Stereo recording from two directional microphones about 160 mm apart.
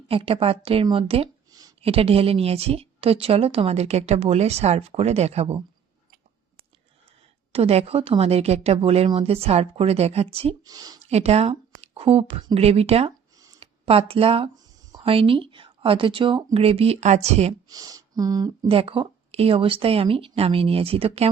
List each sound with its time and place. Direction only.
0.1 s a woman's voice: 35° right (ahead or behind)
1.5 s a sound: 25° right (ahead or behind)
1.8 s a woman's voice: 40° right (ahead or behind)
7.5 s a woman's voice: 40° right (ahead or behind)
10.6 s speech: 25° right (ahead or behind)
11.0 s a woman's voice: 40° right (ahead or behind)
17.7 s speech: 20° right (ahead or behind)
18.7 s a woman's voice: 35° right (ahead or behind)